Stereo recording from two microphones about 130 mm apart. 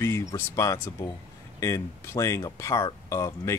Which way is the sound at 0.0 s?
25° left (ahead or behind).